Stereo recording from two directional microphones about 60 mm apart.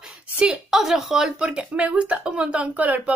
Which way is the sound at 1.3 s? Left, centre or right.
Centre.